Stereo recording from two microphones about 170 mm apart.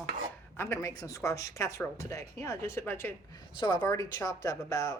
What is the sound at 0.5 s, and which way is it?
Speech, 15° left (ahead or behind).